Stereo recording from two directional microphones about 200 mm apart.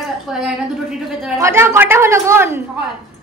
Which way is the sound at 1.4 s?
15° right (ahead or behind).